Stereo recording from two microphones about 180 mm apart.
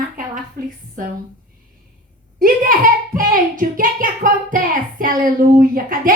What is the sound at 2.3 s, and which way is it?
Speech, 50° right (ahead or behind).